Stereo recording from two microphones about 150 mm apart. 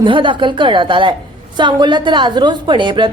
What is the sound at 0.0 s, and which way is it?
A woman's voice, 35° right (ahead or behind).